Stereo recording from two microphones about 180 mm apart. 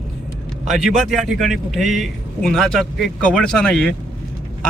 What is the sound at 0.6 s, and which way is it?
A man's voice, centre (ahead or behind).